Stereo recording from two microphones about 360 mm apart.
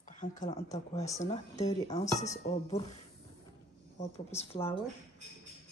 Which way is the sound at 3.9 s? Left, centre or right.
Centre.